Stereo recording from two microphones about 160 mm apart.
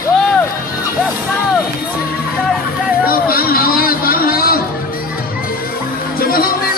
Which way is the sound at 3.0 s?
65° left (ahead or behind).